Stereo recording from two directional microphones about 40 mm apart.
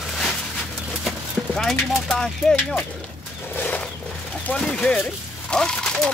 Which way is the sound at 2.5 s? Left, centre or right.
Centre.